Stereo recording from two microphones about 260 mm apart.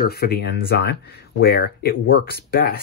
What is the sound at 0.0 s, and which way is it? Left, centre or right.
Speech, left.